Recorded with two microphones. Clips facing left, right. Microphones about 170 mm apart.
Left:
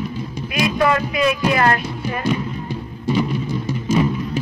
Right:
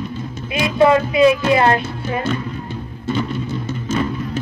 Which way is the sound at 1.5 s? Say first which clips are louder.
Right 3 dB; 25° right (ahead or behind).